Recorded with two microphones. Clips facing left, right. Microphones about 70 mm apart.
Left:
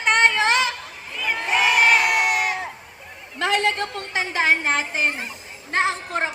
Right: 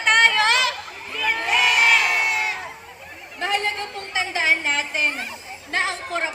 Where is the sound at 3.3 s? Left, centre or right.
Left.